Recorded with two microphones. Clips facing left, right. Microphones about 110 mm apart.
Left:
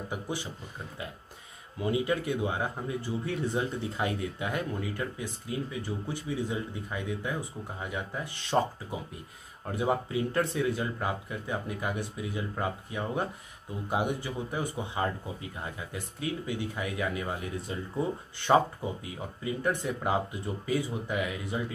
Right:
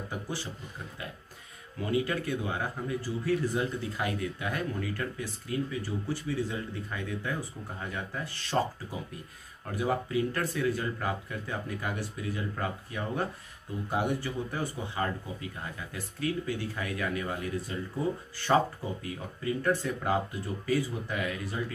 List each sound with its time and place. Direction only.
1.8 s speech: 20° left (ahead or behind)
9.7 s speech: 25° left (ahead or behind)
19.0 s speech: 20° left (ahead or behind)